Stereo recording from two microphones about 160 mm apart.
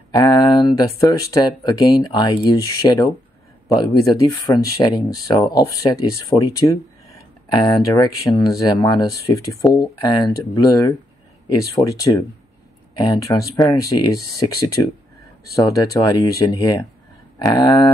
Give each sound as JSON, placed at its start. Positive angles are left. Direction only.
{"t": 0.1, "sound": "a sound", "side_deg": 25}
{"t": 1.0, "sound": "speech", "side_deg": 20}
{"t": 15.5, "sound": "speech", "side_deg": 25}